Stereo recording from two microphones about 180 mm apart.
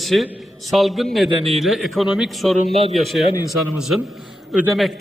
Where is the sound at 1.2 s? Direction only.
35° right (ahead or behind).